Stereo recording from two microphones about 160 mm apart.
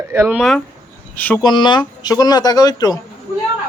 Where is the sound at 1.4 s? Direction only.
25° left (ahead or behind).